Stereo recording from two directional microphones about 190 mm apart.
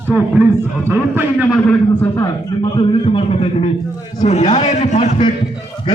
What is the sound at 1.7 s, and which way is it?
Speech, 15° left (ahead or behind).